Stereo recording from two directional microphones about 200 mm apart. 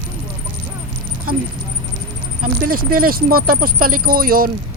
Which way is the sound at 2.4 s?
45° right (ahead or behind).